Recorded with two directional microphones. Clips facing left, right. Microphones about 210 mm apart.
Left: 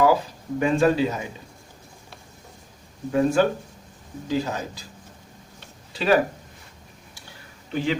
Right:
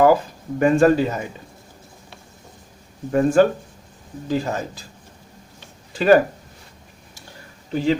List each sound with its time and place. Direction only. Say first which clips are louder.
0.6 s speech: right 5 dB; 50° right (ahead or behind)
3.1 s speech: right 4 dB; 50° right (ahead or behind)
5.9 s speech: right 6 dB; 50° right (ahead or behind)
7.7 s speech: right 5 dB; 35° right (ahead or behind)